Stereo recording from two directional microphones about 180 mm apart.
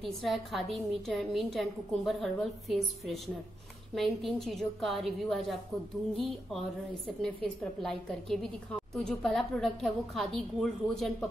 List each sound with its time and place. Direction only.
0.0 s a woman's voice: centre (ahead or behind)
7.2 s a woman's voice: 5° left (ahead or behind)